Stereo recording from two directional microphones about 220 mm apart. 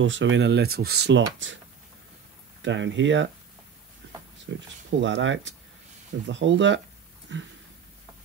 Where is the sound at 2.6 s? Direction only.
55° right (ahead or behind).